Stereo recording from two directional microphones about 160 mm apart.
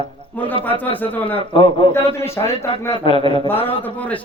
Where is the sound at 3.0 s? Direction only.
35° left (ahead or behind).